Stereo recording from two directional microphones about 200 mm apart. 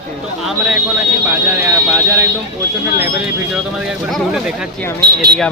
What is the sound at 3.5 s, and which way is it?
Speech, 5° right (ahead or behind).